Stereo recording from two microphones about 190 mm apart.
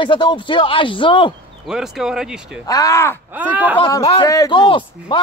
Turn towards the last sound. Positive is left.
turn(degrees=25)  # may be behind; listen again after turning